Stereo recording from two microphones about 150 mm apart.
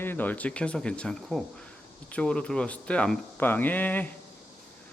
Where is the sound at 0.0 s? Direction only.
15° left (ahead or behind).